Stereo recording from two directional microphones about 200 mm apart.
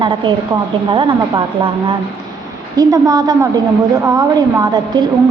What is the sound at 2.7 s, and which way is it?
A woman's voice, 20° right (ahead or behind).